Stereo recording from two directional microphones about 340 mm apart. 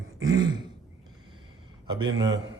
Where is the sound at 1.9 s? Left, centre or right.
Centre.